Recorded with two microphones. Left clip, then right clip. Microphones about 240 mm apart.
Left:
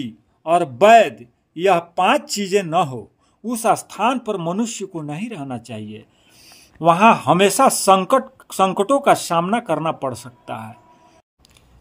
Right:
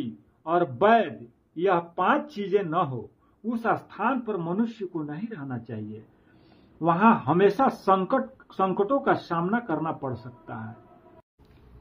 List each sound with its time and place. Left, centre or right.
0.0 s speech: left
6.8 s speech: left